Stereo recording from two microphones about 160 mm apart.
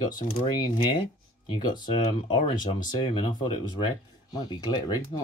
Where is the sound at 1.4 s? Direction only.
25° left (ahead or behind).